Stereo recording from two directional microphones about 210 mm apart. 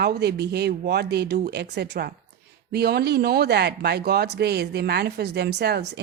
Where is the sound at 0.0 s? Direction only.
50° right (ahead or behind).